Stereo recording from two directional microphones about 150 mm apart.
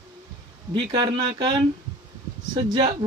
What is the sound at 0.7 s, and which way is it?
Speech, 30° right (ahead or behind).